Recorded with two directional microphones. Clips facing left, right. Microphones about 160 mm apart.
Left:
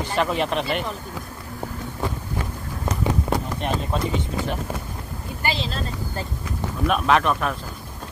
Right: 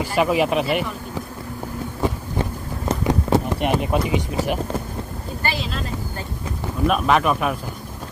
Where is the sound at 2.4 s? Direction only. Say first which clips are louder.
Right 4 dB; 30° right (ahead or behind).